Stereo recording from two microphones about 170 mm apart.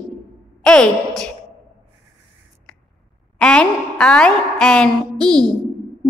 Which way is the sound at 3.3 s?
5° left (ahead or behind).